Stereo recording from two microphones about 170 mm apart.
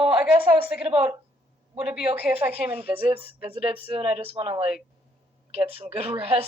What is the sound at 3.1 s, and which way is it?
Speech, 35° right (ahead or behind).